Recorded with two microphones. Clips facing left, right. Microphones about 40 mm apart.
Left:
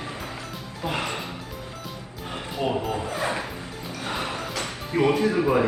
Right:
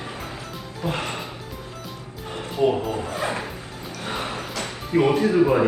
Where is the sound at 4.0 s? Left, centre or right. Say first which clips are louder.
Right 1 dB; right.